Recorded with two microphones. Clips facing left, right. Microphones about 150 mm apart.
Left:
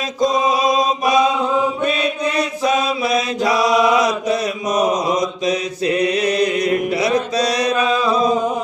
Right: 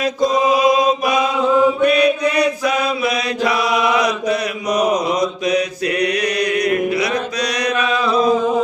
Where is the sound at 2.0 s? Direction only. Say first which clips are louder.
Right 5 dB; 25° left (ahead or behind).